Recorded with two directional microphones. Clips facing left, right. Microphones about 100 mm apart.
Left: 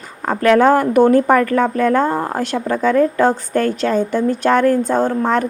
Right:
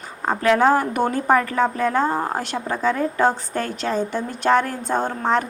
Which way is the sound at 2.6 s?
15° right (ahead or behind).